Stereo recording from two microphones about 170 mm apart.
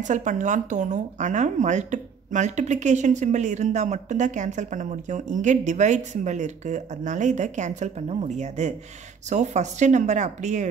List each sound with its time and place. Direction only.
0.0 s speech: 45° right (ahead or behind)